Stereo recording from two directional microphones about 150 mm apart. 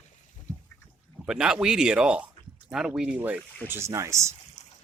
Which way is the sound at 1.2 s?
5° right (ahead or behind).